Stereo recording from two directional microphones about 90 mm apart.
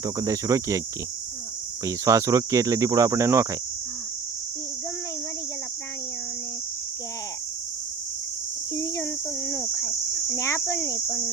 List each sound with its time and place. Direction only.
0.0 s speech: 40° right (ahead or behind)
1.8 s speech: 35° right (ahead or behind)
8.7 s cricket: 35° left (ahead or behind)